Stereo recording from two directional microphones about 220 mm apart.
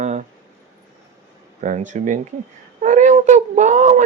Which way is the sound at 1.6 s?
35° right (ahead or behind).